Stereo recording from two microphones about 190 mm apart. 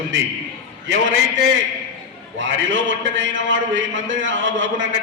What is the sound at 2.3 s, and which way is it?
A man's voice, 75° right (ahead or behind).